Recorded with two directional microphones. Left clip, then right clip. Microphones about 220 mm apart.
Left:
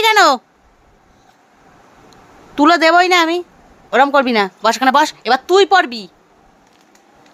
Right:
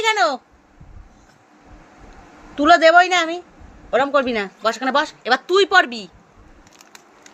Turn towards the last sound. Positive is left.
turn(degrees=20)  # may be behind; listen again after turning